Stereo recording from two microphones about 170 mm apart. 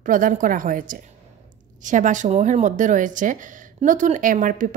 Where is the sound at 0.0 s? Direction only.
50° right (ahead or behind).